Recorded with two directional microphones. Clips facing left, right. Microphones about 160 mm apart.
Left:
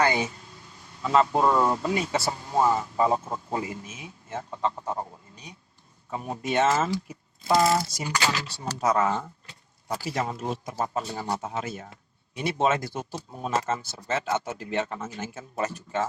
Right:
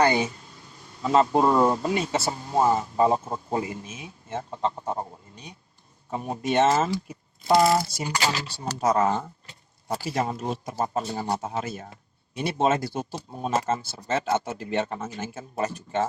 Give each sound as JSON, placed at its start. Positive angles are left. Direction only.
{"t": 1.0, "sound": "speech", "side_deg": -30}
{"t": 6.1, "sound": "speech", "side_deg": -30}